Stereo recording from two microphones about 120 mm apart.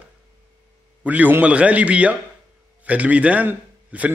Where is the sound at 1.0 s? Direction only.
15° right (ahead or behind).